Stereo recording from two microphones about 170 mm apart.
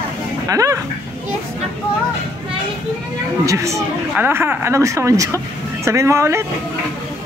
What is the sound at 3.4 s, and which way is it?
Speech, 20° right (ahead or behind).